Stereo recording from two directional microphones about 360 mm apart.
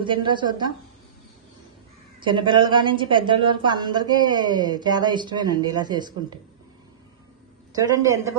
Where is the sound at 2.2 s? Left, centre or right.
Centre.